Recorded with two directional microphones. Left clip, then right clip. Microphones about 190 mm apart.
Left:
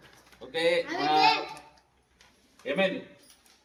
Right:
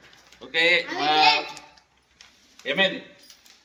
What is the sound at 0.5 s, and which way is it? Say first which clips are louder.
Speech: right 6 dB; 10° right (ahead or behind).